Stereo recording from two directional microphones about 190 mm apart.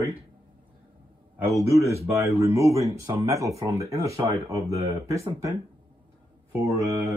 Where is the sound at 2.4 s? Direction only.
15° right (ahead or behind).